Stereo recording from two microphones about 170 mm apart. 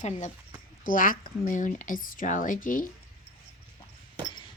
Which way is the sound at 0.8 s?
55° left (ahead or behind).